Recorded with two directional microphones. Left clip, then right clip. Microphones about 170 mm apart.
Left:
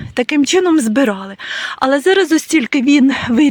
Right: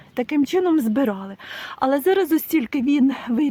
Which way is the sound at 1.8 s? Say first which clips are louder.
Left 6 dB; 10° left (ahead or behind).